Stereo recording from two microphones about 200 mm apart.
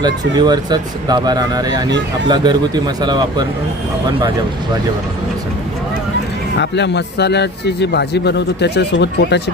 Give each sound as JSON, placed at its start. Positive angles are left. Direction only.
{"t": 0.0, "sound": "speech", "side_deg": -20}
{"t": 6.6, "sound": "a man's voice", "side_deg": 60}